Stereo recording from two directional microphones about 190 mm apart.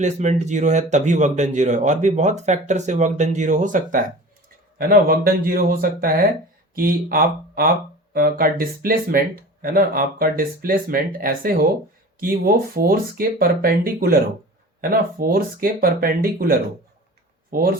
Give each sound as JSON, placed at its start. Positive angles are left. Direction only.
{"t": 0.0, "sound": "speech", "side_deg": -40}